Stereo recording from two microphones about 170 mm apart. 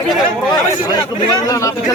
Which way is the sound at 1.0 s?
20° left (ahead or behind).